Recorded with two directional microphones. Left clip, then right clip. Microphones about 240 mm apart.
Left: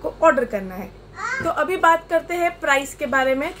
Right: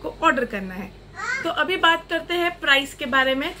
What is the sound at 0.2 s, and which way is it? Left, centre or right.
A woman's voice, centre.